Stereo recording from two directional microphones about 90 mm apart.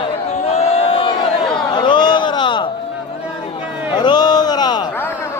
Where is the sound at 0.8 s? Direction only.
90° left.